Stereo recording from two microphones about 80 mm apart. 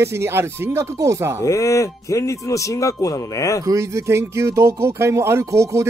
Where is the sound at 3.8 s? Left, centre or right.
Right.